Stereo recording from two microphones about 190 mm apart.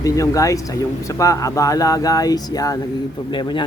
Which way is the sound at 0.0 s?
15° left (ahead or behind).